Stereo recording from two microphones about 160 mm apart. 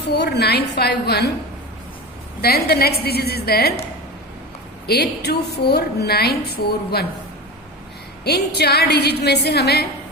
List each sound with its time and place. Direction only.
0.0 s a woman's voice: 90° left
2.4 s a woman's voice: 75° left (ahead or behind)
4.9 s a woman's voice: 90° left
8.2 s a woman's voice: 90° left